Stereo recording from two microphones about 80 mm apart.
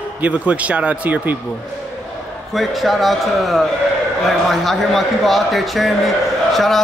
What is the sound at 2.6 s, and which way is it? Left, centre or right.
A man's voice, centre.